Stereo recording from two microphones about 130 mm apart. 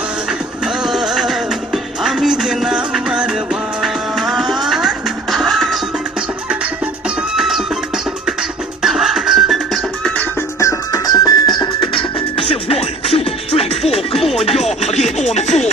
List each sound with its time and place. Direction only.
0.3 s music: 5° right (ahead or behind)
7.2 s music: 5° right (ahead or behind)
8.8 s music: centre (ahead or behind)
10.6 s music: 25° left (ahead or behind); by 14.2 s 50° left (ahead or behind)
14.5 s music: centre (ahead or behind)
14.8 s music: 60° left (ahead or behind)